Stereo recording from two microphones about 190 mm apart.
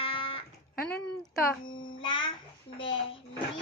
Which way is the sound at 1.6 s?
90° left.